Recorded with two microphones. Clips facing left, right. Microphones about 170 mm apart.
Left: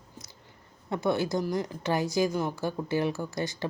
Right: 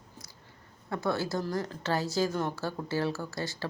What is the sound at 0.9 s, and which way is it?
Speech, 20° left (ahead or behind).